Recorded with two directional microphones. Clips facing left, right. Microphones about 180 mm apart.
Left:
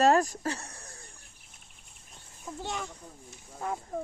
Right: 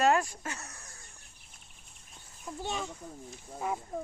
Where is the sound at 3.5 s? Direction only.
5° right (ahead or behind).